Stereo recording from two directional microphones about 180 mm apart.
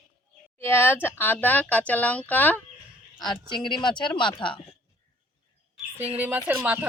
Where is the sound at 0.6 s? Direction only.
10° left (ahead or behind).